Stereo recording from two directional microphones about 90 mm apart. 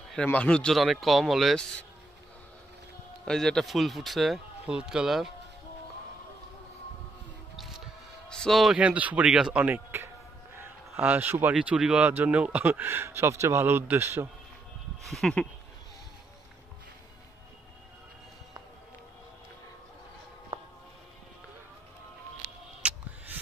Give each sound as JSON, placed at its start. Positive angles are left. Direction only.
{"t": 0.1, "sound": "speech", "side_deg": 15}
{"t": 0.7, "sound": "speech", "side_deg": 0}
{"t": 3.3, "sound": "speech", "side_deg": 5}
{"t": 7.5, "sound": "music", "side_deg": -5}
{"t": 8.3, "sound": "a man's voice", "side_deg": 5}
{"t": 8.7, "sound": "speech", "side_deg": -15}
{"t": 10.5, "sound": "a sound", "side_deg": -30}
{"t": 11.1, "sound": "speech", "side_deg": -20}
{"t": 11.5, "sound": "speech", "side_deg": -10}
{"t": 15.0, "sound": "speech", "side_deg": 5}
{"t": 22.8, "sound": "a sound", "side_deg": -15}